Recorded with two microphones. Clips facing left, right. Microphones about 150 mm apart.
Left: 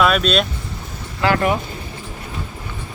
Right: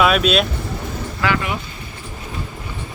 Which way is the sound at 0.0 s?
5° right (ahead or behind).